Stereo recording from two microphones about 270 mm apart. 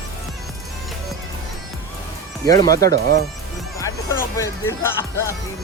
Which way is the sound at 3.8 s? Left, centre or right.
Centre.